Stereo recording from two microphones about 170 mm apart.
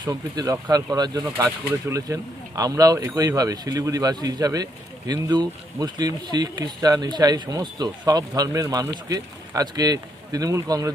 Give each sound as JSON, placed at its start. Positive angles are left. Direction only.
{"t": 0.0, "sound": "speech", "side_deg": -20}